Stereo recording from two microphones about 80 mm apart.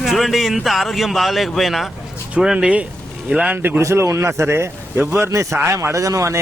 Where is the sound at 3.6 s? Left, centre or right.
Right.